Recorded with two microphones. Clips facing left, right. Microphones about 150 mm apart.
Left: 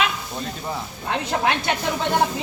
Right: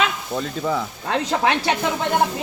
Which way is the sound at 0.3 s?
90° right.